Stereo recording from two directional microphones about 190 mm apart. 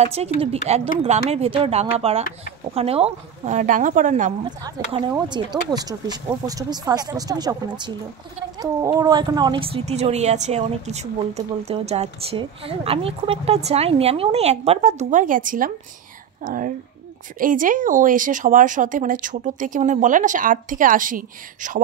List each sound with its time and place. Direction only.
0.0 s speech: 35° right (ahead or behind)
4.5 s a woman's voice: 20° right (ahead or behind); by 21.8 s 45° right (ahead or behind)